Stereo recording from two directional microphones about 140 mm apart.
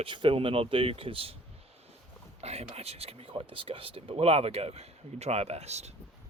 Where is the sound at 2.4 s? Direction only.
50° right (ahead or behind).